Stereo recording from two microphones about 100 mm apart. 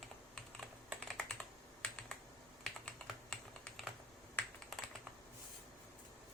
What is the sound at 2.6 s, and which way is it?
Computer keyboard, 5° left (ahead or behind).